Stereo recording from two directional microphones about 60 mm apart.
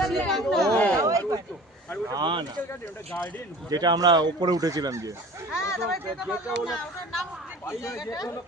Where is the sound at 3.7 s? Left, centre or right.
Right.